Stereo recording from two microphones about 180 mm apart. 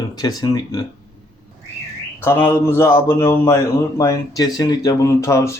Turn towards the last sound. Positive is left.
turn(degrees=15)  # may be behind; listen again after turning